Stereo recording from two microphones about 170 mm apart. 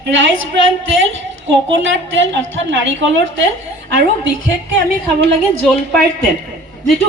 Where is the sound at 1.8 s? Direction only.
90° right.